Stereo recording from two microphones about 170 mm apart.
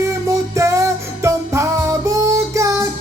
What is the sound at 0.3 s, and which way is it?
Music, 15° right (ahead or behind).